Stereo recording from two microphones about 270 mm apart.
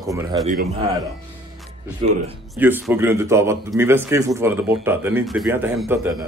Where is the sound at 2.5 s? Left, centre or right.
Centre.